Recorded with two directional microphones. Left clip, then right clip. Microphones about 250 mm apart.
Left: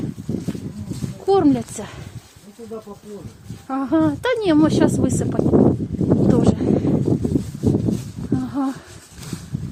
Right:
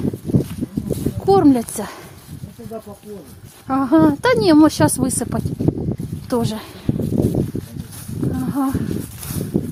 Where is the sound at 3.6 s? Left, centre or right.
Centre.